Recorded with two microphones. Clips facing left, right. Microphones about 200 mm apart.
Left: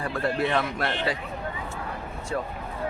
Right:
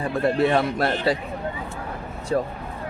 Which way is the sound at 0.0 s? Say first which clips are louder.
Right 6 dB; 25° right (ahead or behind).